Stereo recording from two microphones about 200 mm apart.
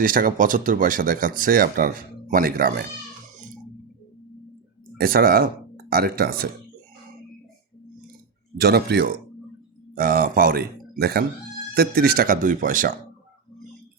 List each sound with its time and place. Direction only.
0.0 s speech: 45° right (ahead or behind)
4.9 s speech: 50° right (ahead or behind)
8.5 s a man's voice: 50° right (ahead or behind)